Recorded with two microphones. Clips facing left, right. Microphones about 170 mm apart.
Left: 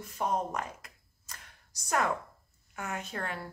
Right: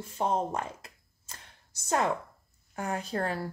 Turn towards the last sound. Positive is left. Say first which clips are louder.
# right 6 dB
turn(degrees=-35)  # may be behind; listen again after turning